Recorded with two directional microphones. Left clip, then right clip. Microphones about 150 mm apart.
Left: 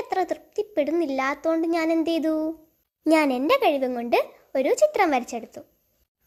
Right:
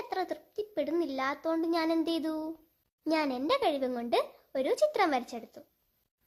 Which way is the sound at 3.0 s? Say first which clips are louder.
Left 10 dB; 30° left (ahead or behind).